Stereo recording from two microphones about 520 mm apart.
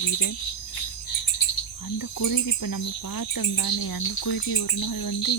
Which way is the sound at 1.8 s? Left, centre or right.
Left.